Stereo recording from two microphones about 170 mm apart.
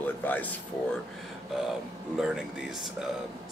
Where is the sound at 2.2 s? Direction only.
5° right (ahead or behind).